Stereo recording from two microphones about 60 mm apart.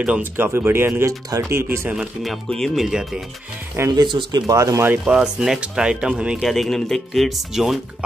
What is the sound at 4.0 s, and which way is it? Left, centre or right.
Speech, right.